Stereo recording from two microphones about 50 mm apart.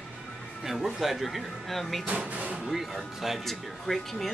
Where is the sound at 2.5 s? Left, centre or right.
Centre.